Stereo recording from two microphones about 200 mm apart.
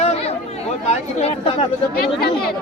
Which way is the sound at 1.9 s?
50° left (ahead or behind).